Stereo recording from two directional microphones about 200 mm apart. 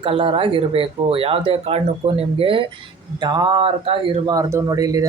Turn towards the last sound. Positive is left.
turn(degrees=-15)  # may be behind; listen again after turning